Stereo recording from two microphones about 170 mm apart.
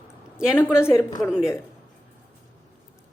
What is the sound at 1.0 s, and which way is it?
Speech, 20° left (ahead or behind).